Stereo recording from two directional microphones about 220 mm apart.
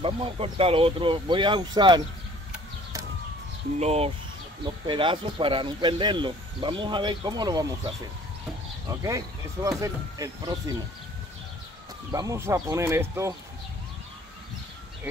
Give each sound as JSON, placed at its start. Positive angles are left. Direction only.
{"t": 0.0, "sound": "speech", "side_deg": -25}
{"t": 3.8, "sound": "speech", "side_deg": -30}
{"t": 9.0, "sound": "speech", "side_deg": -15}
{"t": 12.1, "sound": "speech", "side_deg": -15}